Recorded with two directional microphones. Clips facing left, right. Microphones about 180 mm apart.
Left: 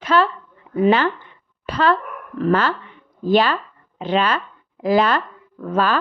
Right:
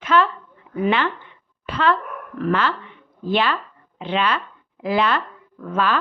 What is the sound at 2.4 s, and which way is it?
A woman's voice, 40° left (ahead or behind).